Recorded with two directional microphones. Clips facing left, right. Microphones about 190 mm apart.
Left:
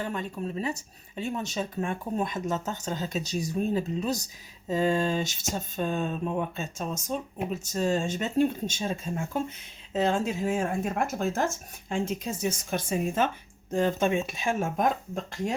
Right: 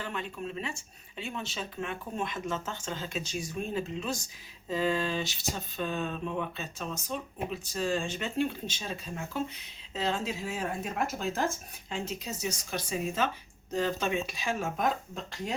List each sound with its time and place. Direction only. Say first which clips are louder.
0.0 s speech: left 4 dB; 40° left (ahead or behind)